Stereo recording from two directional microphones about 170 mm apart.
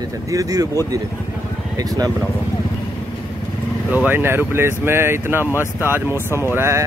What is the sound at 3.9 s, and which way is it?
Speech, 10° right (ahead or behind).